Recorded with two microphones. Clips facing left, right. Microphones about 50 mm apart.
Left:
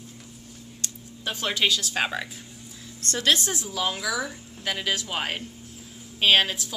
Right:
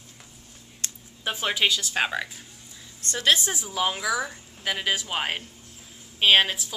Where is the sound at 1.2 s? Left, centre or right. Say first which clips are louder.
Right 1 dB; centre.